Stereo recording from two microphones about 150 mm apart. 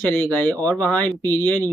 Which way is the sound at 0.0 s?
15° left (ahead or behind).